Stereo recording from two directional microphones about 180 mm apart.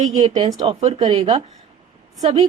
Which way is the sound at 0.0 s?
40° right (ahead or behind).